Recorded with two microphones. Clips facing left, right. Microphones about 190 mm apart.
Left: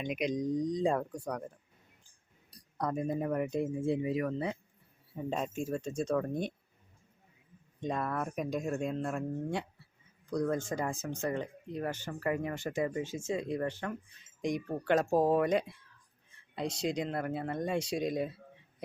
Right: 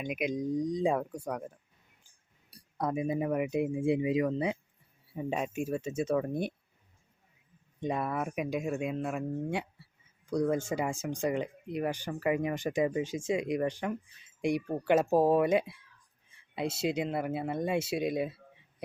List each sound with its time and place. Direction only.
0.0 s speech: 5° right (ahead or behind)
2.7 s speech: 5° right (ahead or behind)
7.8 s speech: 10° right (ahead or behind)